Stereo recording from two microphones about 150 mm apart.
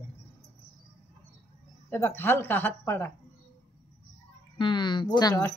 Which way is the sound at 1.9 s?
15° left (ahead or behind).